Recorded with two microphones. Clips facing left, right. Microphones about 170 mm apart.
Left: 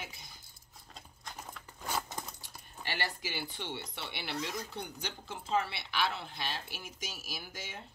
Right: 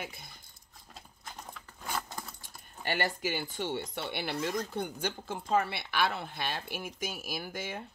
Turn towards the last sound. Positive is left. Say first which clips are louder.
# right 7 dB
turn(degrees=-55)  # may be behind; listen again after turning